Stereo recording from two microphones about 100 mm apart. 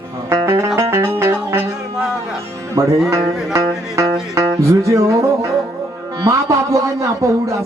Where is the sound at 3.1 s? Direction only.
35° right (ahead or behind).